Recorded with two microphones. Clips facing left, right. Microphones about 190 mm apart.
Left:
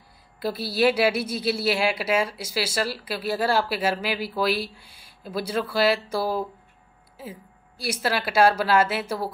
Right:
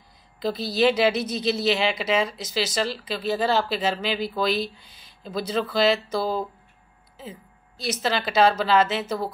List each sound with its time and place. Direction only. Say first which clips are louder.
0.4 s a woman's voice: right 1 dB; 10° left (ahead or behind)